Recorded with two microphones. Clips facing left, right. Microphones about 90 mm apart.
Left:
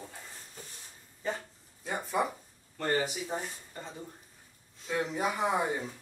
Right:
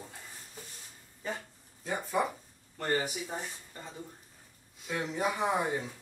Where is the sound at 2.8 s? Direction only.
20° left (ahead or behind).